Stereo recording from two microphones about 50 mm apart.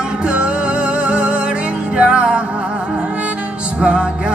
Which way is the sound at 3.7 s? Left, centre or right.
Right.